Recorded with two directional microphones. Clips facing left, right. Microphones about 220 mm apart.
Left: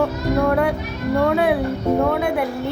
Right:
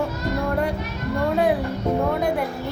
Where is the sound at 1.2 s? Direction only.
65° left (ahead or behind).